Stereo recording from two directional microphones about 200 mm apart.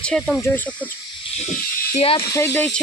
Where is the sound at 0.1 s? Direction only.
5° left (ahead or behind).